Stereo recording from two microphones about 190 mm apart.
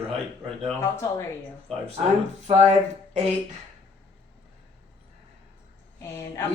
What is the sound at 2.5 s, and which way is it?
Speech, 30° right (ahead or behind).